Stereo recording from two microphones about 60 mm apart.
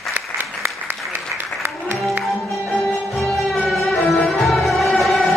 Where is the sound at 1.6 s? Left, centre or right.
Right.